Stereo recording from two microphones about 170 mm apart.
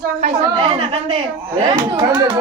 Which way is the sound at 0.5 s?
30° right (ahead or behind).